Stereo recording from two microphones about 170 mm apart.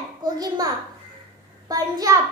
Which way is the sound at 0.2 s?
25° right (ahead or behind).